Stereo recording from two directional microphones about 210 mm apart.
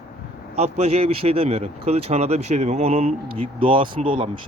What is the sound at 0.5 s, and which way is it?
Speech, 30° right (ahead or behind).